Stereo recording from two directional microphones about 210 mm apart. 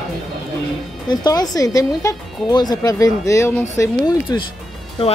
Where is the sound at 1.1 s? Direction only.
20° left (ahead or behind).